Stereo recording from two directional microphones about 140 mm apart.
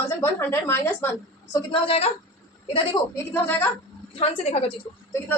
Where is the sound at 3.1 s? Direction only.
15° left (ahead or behind).